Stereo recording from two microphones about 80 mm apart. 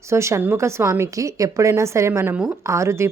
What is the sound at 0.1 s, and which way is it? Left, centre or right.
A woman's voice, right.